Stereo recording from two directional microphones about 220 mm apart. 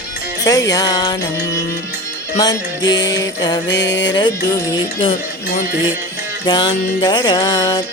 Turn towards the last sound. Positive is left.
turn(degrees=20)  # may be behind; listen again after turning